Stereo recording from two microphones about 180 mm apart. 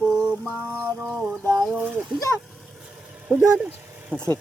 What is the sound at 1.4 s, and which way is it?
Speech, 10° left (ahead or behind).